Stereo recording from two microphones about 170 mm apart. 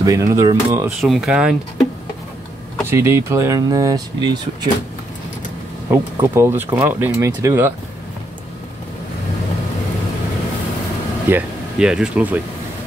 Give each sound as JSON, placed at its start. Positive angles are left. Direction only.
{"t": 0.0, "sound": "speech", "side_deg": -20}
{"t": 1.0, "sound": "speech", "side_deg": 0}
{"t": 2.9, "sound": "speech", "side_deg": -15}
{"t": 5.9, "sound": "speech", "side_deg": -15}
{"t": 11.2, "sound": "speech", "side_deg": -5}